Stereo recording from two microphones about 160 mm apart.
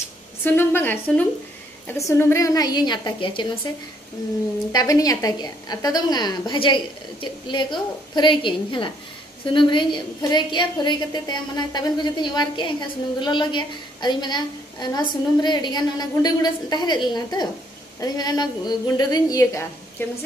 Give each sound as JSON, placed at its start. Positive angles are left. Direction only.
{"t": 0.4, "sound": "a woman's voice", "side_deg": 15}
{"t": 4.7, "sound": "a woman's voice", "side_deg": 20}